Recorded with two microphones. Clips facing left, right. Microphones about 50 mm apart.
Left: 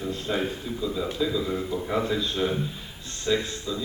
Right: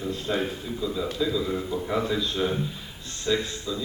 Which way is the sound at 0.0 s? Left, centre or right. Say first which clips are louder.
Even; centre.